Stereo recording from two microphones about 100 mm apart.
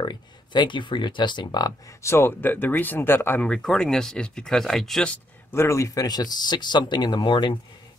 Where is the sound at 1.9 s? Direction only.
30° left (ahead or behind).